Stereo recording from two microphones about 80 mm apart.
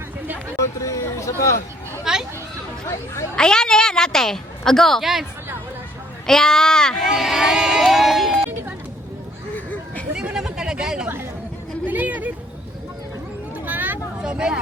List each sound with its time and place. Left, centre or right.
0.8 s a sound: left
2.1 s a sound: centre
2.8 s speech: left
3.3 s a woman's voice: centre
6.2 s speech: centre
7.1 s speech: centre
10.2 s chatter: centre
11.9 s speech: right
13.7 s vehicle: right
14.2 s a sound: centre